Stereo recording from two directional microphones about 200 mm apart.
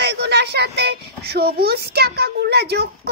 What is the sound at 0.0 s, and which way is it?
A child's voice, 55° right (ahead or behind).